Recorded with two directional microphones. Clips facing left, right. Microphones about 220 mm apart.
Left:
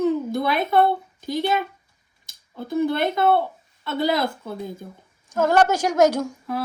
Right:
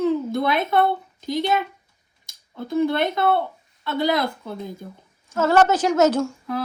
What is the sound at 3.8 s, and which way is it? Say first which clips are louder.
Speech: even; centre (ahead or behind).